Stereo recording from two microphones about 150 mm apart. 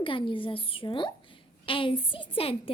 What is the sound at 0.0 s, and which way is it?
A woman's voice, 35° left (ahead or behind).